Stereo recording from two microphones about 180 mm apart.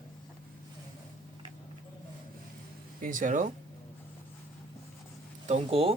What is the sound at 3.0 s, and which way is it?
Speech, 45° right (ahead or behind).